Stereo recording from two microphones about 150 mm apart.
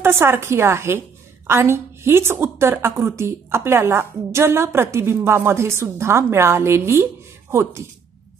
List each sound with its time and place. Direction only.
0.0 s a woman's voice: 15° right (ahead or behind)